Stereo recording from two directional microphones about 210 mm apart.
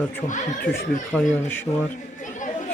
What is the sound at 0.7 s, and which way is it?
Speech, 45° left (ahead or behind).